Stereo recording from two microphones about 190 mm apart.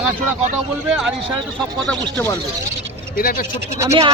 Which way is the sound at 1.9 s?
10° left (ahead or behind).